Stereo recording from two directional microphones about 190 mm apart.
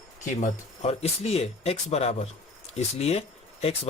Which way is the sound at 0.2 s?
40° left (ahead or behind).